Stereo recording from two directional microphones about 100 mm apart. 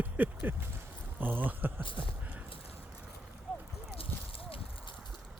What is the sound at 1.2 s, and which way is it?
Speech, 20° right (ahead or behind).